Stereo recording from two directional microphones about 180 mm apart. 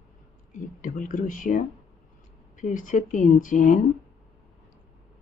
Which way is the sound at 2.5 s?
45° left (ahead or behind).